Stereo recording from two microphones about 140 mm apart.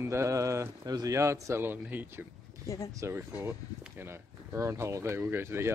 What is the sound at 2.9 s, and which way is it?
Speech, 20° right (ahead or behind).